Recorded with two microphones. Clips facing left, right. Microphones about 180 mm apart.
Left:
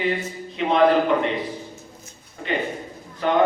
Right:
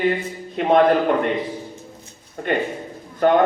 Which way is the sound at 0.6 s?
50° right (ahead or behind).